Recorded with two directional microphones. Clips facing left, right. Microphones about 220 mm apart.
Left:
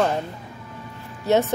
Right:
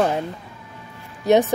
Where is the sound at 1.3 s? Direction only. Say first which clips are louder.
Right 3 dB; 15° right (ahead or behind).